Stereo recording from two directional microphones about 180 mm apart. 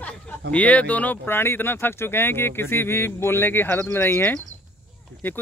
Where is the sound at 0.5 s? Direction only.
5° left (ahead or behind).